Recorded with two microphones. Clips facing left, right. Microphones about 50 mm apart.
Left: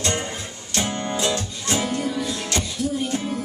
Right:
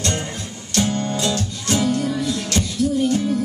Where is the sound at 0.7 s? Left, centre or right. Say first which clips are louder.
Right 3 dB; centre.